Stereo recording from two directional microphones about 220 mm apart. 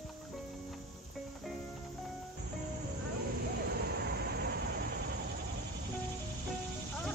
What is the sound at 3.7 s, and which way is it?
Vehicle, 45° right (ahead or behind).